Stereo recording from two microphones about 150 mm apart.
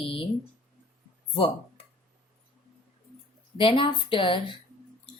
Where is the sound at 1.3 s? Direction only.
40° left (ahead or behind).